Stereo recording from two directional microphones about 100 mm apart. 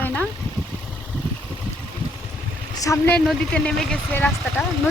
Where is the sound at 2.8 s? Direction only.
35° left (ahead or behind).